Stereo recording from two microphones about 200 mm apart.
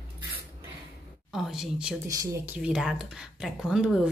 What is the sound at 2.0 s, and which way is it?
Speech, 15° right (ahead or behind).